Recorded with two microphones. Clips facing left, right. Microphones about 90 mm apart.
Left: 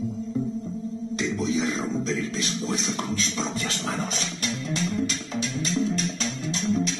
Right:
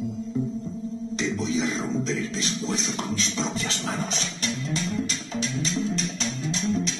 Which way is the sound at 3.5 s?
40° left (ahead or behind).